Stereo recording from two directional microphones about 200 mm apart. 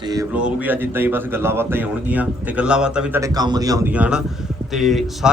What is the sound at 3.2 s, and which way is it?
A man's voice, 15° right (ahead or behind).